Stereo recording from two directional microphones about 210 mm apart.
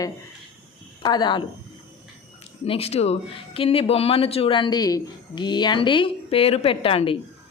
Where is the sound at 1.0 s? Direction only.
20° left (ahead or behind).